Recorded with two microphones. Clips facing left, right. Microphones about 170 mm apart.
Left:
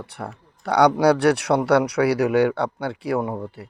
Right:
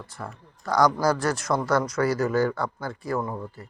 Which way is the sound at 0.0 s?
65° left (ahead or behind).